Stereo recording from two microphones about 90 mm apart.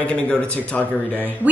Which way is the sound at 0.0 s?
10° left (ahead or behind).